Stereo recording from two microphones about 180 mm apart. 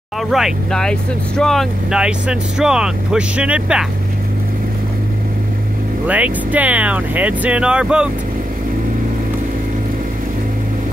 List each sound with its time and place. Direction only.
0.3 s speech: centre (ahead or behind)
6.0 s speech: 10° right (ahead or behind)